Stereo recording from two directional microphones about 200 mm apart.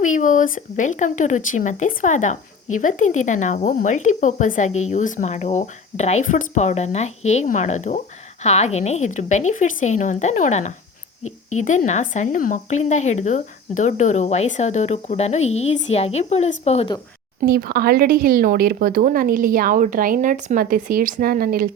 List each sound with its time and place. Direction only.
0.0 s a woman's voice: 40° left (ahead or behind)
17.4 s a woman's voice: 50° right (ahead or behind)